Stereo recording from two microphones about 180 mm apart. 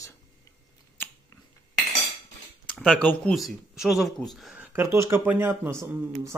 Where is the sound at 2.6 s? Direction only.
5° left (ahead or behind).